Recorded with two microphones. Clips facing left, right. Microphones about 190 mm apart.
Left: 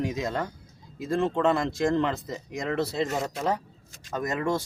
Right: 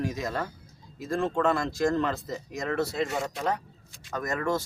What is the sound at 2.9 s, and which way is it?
Speech, 35° left (ahead or behind).